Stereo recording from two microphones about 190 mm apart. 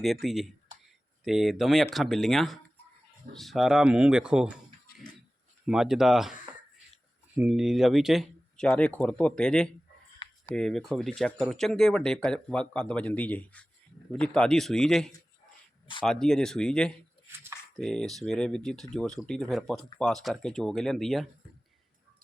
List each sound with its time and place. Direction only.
0.0 s speech: centre (ahead or behind)
4.9 s a sound: 55° left (ahead or behind)
5.6 s speech: 5° right (ahead or behind)
7.3 s speech: 5° right (ahead or behind)